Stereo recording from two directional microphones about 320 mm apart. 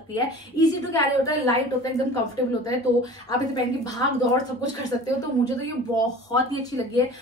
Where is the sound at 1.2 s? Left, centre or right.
Centre.